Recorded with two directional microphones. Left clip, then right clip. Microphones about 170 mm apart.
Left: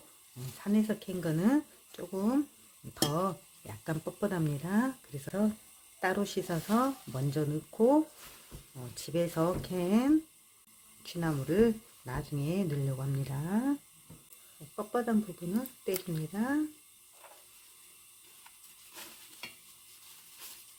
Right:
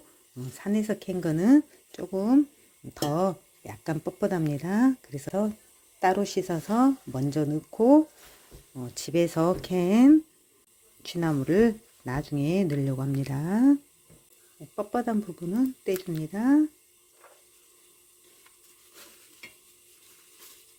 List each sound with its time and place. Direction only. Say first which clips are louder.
0.6 s speech: right 3 dB; 35° right (ahead or behind)
14.8 s speech: right 4 dB; 40° right (ahead or behind)